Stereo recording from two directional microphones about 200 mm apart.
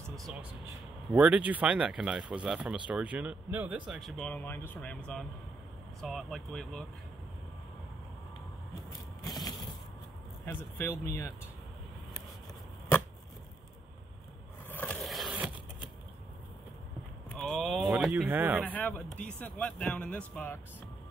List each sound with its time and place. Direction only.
0.1 s a sound: centre (ahead or behind)
1.1 s speech: 5° right (ahead or behind)
9.2 s crushing: 20° left (ahead or behind)
10.4 s speech: 10° left (ahead or behind)
14.7 s a sound: 5° left (ahead or behind)
17.3 s speech: centre (ahead or behind)
18.7 s speech: 5° left (ahead or behind)